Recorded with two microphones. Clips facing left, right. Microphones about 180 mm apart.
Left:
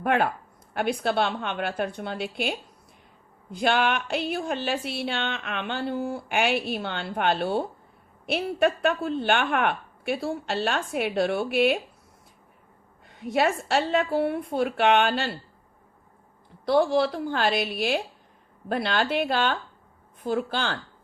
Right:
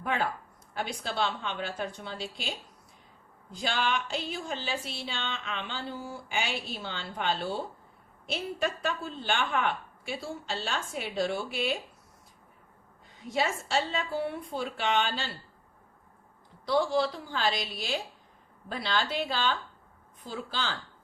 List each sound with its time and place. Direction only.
0.0 s a woman's voice: 60° left (ahead or behind)
13.1 s a woman's voice: 60° left (ahead or behind)
16.6 s a woman's voice: 55° left (ahead or behind)